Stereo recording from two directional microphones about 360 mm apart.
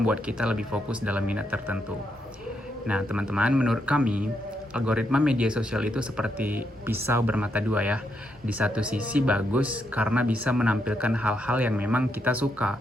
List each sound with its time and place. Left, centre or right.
0.0 s speech: centre
2.8 s speech: centre